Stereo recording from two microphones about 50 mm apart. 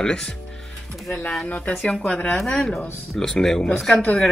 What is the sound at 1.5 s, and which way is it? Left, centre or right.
Speech, left.